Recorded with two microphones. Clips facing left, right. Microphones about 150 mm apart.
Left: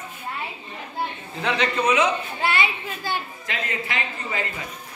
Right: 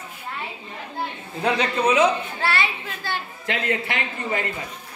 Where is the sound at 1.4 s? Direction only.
35° right (ahead or behind).